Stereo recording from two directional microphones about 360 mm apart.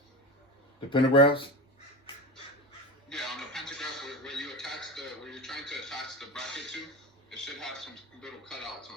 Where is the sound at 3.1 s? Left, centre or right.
Centre.